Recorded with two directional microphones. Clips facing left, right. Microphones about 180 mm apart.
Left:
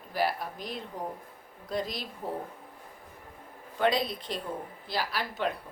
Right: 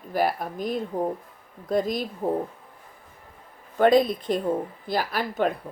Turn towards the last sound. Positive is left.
turn(degrees=-50)  # may be behind; listen again after turning